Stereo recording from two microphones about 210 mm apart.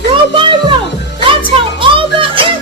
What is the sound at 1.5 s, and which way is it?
Music, 25° right (ahead or behind).